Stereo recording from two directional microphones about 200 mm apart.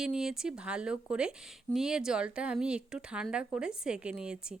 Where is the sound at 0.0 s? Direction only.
5° right (ahead or behind).